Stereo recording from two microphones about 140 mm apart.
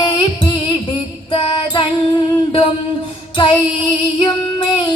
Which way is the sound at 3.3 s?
35° left (ahead or behind).